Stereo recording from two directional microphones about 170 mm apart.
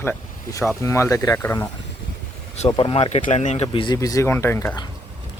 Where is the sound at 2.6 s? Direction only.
30° left (ahead or behind).